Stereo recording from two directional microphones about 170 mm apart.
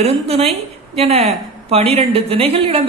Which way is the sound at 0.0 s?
35° right (ahead or behind).